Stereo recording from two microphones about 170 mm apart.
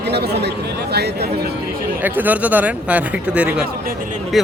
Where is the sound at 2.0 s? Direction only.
10° right (ahead or behind).